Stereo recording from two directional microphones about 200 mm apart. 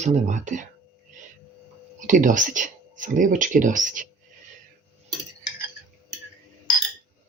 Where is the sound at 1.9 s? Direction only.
40° right (ahead or behind).